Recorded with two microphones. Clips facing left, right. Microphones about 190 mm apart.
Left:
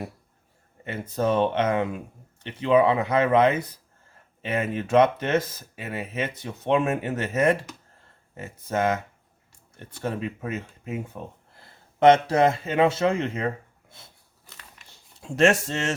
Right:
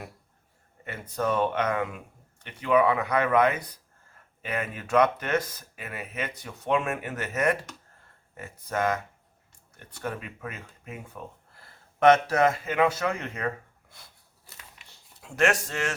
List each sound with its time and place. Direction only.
0.9 s speech: 25° left (ahead or behind)
15.2 s speech: 25° left (ahead or behind)